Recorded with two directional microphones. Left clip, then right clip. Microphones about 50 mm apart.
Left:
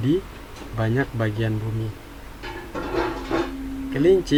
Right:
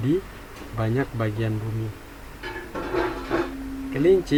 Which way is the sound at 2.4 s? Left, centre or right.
Right.